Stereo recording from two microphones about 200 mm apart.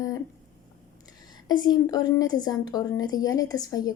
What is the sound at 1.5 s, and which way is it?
A woman's voice, 20° left (ahead or behind).